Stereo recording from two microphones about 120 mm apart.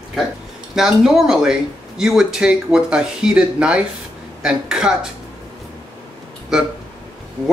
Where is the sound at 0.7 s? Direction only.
5° right (ahead or behind).